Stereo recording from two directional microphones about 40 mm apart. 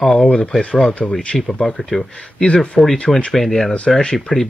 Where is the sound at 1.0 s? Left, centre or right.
Left.